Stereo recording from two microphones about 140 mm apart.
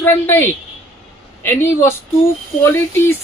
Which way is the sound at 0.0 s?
15° left (ahead or behind).